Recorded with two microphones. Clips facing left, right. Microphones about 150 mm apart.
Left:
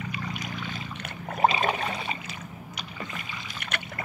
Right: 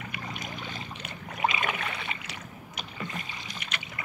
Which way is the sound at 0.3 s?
45° right (ahead or behind).